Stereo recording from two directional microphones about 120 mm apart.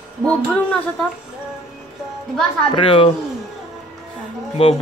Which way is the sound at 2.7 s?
45° left (ahead or behind).